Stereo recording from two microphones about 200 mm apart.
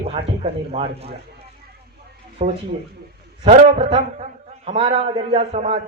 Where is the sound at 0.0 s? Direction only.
30° right (ahead or behind).